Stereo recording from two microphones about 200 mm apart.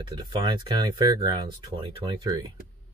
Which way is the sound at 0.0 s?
20° right (ahead or behind).